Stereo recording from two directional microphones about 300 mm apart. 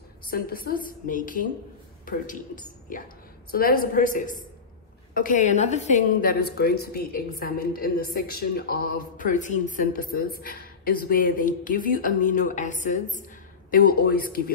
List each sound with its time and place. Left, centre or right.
0.3 s a woman's voice: left